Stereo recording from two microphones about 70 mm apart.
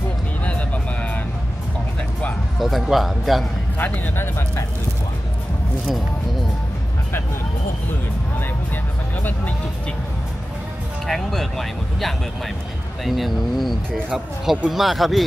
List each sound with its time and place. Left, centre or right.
0.4 s music: centre
2.6 s speech: centre
3.7 s speech: left
11.1 s speech: centre